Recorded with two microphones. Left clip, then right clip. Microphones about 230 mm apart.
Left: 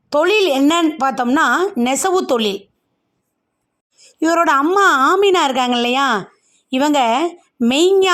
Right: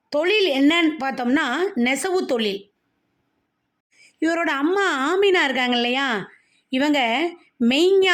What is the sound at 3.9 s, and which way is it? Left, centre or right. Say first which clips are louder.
A woman's voice: left 7 dB; centre.